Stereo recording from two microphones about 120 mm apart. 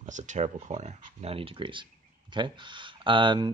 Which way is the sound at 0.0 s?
90° right.